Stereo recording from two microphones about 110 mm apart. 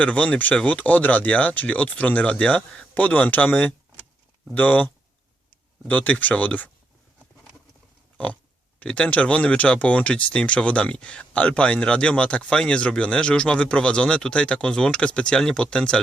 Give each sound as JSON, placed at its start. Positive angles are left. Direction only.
{"t": 0.0, "sound": "speech", "side_deg": 15}
{"t": 5.9, "sound": "speech", "side_deg": 15}
{"t": 8.8, "sound": "speech", "side_deg": 10}